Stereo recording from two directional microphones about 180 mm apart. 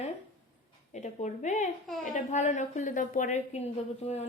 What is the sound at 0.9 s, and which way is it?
A woman's voice, 40° left (ahead or behind).